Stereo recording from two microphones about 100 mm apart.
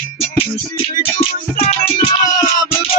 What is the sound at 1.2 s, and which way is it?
Music, 90° left.